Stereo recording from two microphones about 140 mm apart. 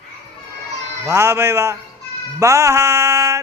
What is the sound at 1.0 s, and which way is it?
Music, 20° right (ahead or behind).